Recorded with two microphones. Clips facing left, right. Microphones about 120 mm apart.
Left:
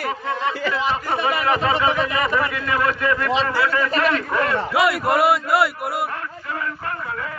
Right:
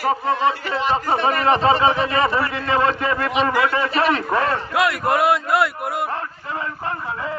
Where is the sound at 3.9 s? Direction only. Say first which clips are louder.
Right 1 dB; 35° right (ahead or behind).